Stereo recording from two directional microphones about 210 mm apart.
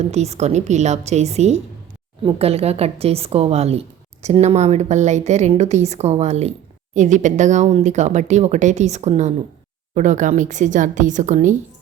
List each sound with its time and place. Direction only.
0.1 s a woman's voice: 30° right (ahead or behind)